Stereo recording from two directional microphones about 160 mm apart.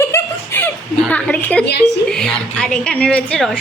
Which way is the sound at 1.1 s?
10° left (ahead or behind).